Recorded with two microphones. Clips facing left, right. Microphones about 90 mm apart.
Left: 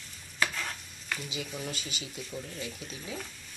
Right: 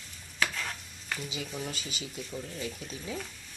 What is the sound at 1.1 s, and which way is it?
Speech, 30° right (ahead or behind).